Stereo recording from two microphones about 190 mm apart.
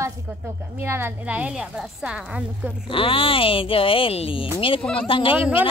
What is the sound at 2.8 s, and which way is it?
Speech, 30° left (ahead or behind).